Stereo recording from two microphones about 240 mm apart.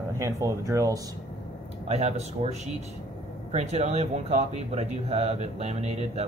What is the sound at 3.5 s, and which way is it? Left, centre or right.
Speech, right.